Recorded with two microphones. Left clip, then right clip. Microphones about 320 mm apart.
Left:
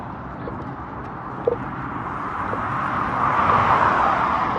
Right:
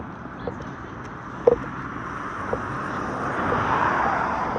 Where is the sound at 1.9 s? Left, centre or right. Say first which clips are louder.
Left 7 dB; centre.